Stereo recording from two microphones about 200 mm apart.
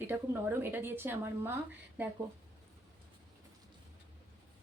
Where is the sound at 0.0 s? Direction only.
10° right (ahead or behind).